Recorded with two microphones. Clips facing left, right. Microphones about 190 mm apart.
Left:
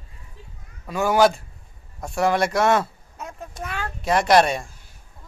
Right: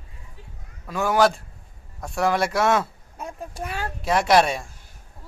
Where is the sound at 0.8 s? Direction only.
Centre (ahead or behind).